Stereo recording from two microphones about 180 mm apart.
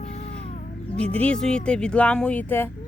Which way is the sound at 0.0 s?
35° left (ahead or behind).